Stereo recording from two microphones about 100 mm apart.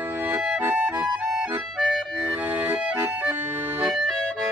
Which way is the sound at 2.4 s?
15° right (ahead or behind).